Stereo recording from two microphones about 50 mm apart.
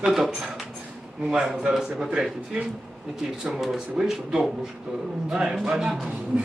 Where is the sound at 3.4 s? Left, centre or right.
Centre.